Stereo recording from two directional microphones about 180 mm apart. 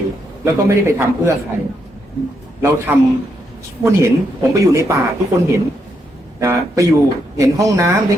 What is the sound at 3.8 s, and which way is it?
A man's voice, 15° right (ahead or behind).